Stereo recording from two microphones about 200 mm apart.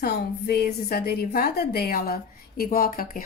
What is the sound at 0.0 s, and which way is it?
A woman's voice, 50° left (ahead or behind).